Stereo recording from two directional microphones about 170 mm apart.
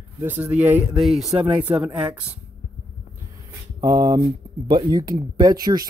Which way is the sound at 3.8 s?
25° right (ahead or behind).